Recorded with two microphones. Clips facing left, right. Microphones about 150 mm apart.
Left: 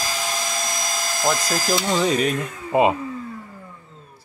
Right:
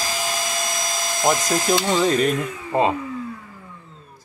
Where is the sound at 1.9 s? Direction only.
Centre (ahead or behind).